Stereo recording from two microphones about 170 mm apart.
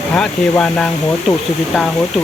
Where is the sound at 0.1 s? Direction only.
5° left (ahead or behind).